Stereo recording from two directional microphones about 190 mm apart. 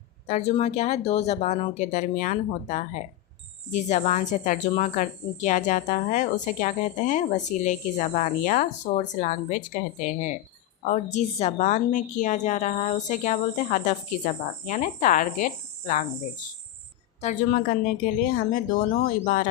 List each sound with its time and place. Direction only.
0.3 s speech: 35° left (ahead or behind)
18.2 s speech: 45° left (ahead or behind)